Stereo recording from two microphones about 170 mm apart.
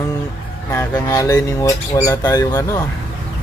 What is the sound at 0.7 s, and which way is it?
Speech, 15° left (ahead or behind).